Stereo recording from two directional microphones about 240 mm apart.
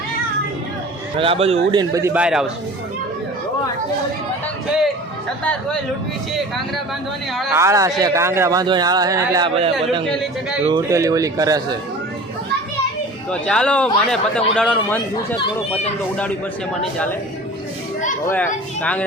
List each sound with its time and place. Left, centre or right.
1.1 s speech: right; by 2.5 s centre
7.5 s speech: centre
10.1 s a man's voice: centre
10.7 s speech: centre
13.3 s a man's voice: centre
18.3 s a man's voice: centre